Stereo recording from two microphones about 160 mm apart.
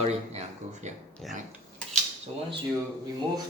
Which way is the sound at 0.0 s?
45° right (ahead or behind).